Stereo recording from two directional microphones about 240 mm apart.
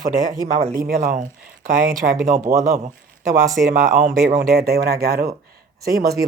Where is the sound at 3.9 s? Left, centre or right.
Right.